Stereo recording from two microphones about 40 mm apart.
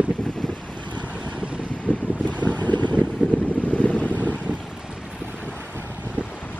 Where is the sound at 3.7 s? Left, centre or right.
Left.